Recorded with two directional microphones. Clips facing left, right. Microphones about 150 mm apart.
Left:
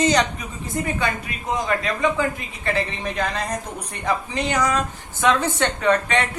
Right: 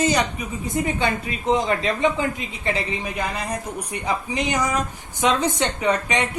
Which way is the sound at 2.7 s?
10° right (ahead or behind).